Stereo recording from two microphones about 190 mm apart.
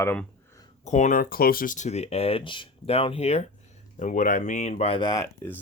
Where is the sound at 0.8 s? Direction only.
40° left (ahead or behind).